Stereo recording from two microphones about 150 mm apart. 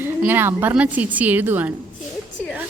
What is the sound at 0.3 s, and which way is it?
Speech, 15° right (ahead or behind).